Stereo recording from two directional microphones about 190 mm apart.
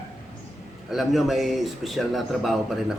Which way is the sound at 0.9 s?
Centre (ahead or behind).